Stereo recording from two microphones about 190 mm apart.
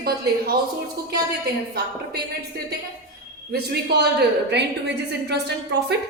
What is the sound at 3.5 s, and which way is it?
A woman's voice, 60° right (ahead or behind).